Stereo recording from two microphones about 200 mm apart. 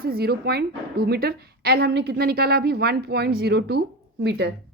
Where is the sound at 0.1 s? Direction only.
50° right (ahead or behind).